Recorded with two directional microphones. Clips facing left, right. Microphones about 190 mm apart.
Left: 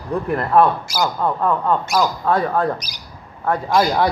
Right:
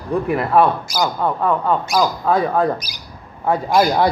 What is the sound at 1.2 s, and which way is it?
A man's voice, 5° right (ahead or behind).